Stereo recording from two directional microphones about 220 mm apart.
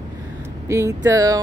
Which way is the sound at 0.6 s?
15° right (ahead or behind).